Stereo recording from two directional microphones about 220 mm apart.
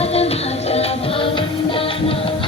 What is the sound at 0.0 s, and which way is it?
Music, 30° left (ahead or behind).